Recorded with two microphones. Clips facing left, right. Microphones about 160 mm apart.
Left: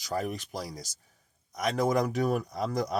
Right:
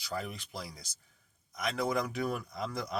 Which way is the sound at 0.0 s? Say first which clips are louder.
Left 6 dB; 45° left (ahead or behind).